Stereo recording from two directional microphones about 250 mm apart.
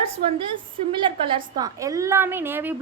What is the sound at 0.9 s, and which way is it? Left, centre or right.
A woman's voice, centre.